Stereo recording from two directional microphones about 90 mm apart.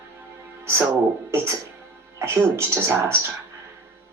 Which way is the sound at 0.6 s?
30° right (ahead or behind).